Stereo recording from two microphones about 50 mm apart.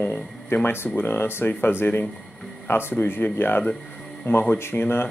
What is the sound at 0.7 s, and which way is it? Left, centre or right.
A woman's voice, left.